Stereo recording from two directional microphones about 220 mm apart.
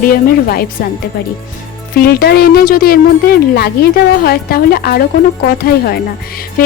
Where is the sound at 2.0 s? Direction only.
45° left (ahead or behind).